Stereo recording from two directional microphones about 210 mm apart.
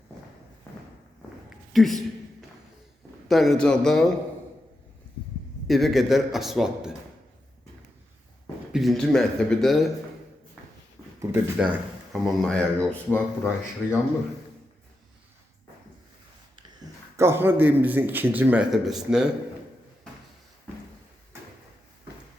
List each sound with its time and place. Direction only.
1.5 s a sound: centre (ahead or behind)
3.2 s speech: centre (ahead or behind)
5.6 s speech: centre (ahead or behind)
8.7 s speech: centre (ahead or behind)
11.2 s speech: 5° right (ahead or behind)
17.2 s a man's voice: 10° right (ahead or behind)